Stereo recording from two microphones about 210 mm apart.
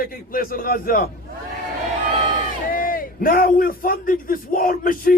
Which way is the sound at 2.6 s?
40° left (ahead or behind).